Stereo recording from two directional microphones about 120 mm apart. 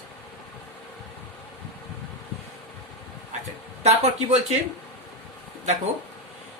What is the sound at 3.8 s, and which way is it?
Speech, 65° right (ahead or behind).